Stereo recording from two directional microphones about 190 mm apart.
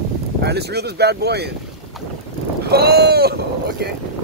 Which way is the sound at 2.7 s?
55° right (ahead or behind).